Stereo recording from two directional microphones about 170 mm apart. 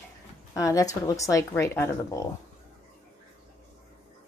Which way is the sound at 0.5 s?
20° left (ahead or behind).